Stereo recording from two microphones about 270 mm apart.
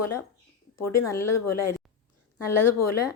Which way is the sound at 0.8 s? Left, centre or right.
Left.